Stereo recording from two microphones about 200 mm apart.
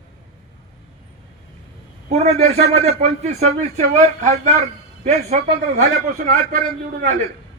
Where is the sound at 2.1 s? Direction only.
35° right (ahead or behind).